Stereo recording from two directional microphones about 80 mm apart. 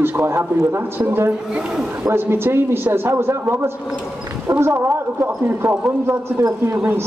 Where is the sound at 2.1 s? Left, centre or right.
Right.